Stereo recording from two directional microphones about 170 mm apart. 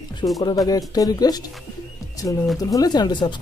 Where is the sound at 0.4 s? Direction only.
25° left (ahead or behind).